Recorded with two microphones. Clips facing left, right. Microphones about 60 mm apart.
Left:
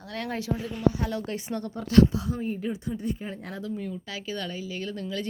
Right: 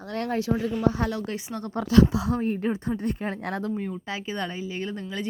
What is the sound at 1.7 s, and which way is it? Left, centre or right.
Speech, right.